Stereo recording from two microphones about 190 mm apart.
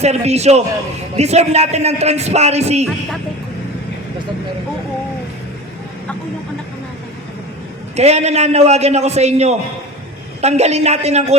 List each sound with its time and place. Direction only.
0.0 s a man's voice: 35° right (ahead or behind)
7.9 s a man's voice: 35° right (ahead or behind)